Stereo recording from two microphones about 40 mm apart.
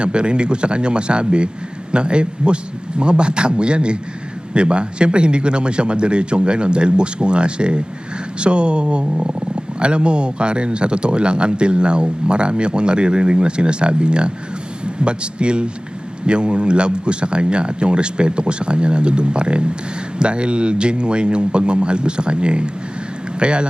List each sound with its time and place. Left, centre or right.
0.0 s speech: right